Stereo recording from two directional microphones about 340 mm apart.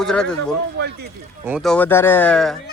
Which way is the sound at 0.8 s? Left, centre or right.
Right.